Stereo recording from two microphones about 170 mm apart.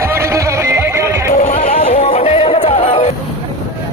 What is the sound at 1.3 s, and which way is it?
Music, 45° left (ahead or behind).